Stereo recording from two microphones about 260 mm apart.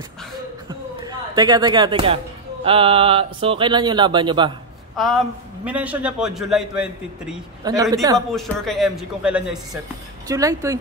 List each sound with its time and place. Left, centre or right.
0.7 s music: centre
2.6 s speech: right
4.9 s a man's voice: centre
8.3 s a man's voice: centre